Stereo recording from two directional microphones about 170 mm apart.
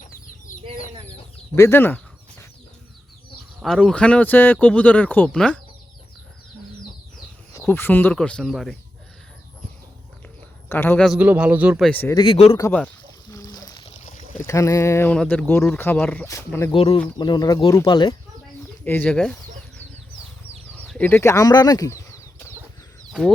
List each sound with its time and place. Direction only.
0.5 s chicken: 55° left (ahead or behind)
1.5 s speech: 15° left (ahead or behind)
3.6 s speech: 5° left (ahead or behind)
7.6 s speech: 10° left (ahead or behind)
10.7 s speech: 10° left (ahead or behind)
11.1 s a man's voice: 10° right (ahead or behind)
11.9 s speech: 10° left (ahead or behind)
12.1 s speech: 30° left (ahead or behind)
13.3 s a sound: 20° left (ahead or behind)
14.3 s speech: 15° left (ahead or behind)
16.7 s speech: 30° left (ahead or behind)
18.9 s speech: 10° left (ahead or behind)
20.7 s bird flight: 5° left (ahead or behind)